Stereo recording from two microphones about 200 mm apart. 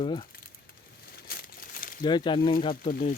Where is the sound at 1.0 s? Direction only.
50° left (ahead or behind).